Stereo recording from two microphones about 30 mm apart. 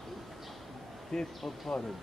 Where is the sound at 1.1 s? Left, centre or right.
Centre.